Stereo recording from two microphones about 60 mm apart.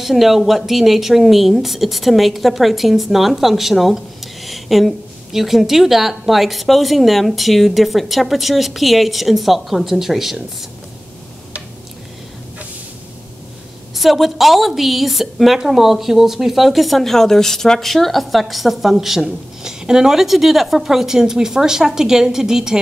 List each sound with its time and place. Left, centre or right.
0.0 s speech: centre
13.9 s speech: centre